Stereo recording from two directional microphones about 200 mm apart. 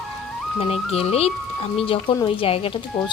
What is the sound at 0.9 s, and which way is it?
Speech, 30° left (ahead or behind).